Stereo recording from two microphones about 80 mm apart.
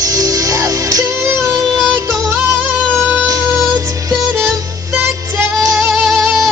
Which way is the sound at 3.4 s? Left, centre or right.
Right.